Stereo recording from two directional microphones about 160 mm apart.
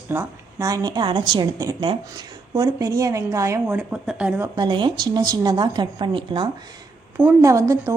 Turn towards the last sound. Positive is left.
turn(degrees=-20)  # may be behind; listen again after turning